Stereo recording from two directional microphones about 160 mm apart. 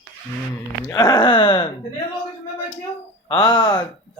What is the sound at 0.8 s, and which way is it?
Speech, 25° left (ahead or behind).